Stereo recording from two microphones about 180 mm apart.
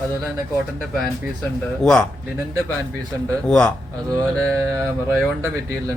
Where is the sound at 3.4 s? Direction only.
5° left (ahead or behind).